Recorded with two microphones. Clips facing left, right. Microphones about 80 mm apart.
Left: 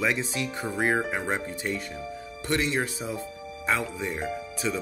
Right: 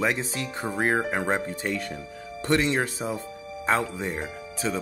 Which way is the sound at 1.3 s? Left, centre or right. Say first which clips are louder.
Right 3 dB; right.